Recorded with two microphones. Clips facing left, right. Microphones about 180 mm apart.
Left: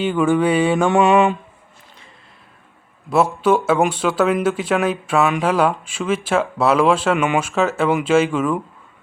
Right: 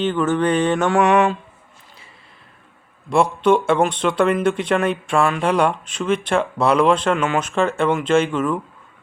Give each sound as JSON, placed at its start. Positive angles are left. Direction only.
{"t": 0.0, "sound": "mantra", "side_deg": 10}
{"t": 0.9, "sound": "mantra", "side_deg": 25}
{"t": 3.1, "sound": "speech", "side_deg": 5}
{"t": 7.9, "sound": "mantra", "side_deg": 5}